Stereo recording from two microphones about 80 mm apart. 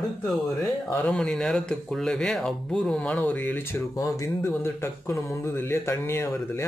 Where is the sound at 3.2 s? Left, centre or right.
Left.